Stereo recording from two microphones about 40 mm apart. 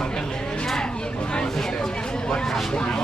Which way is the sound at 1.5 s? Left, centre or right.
Centre.